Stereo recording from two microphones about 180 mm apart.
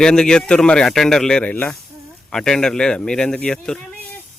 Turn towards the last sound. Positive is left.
turn(degrees=5)  # may be behind; listen again after turning